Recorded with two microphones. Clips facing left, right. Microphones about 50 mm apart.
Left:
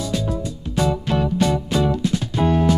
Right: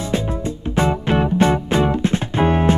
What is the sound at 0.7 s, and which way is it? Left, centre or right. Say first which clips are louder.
Music: right 2 dB; right.